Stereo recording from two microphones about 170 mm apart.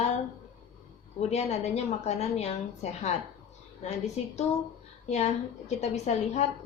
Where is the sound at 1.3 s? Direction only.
40° left (ahead or behind).